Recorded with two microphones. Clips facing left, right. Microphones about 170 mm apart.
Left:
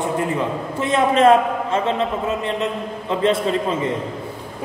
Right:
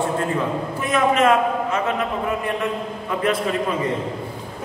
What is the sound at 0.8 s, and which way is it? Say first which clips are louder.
A man's voice: left 3 dB; 30° left (ahead or behind).